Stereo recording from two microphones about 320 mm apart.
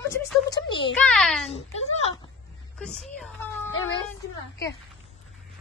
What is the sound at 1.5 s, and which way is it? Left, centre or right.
Speech, centre.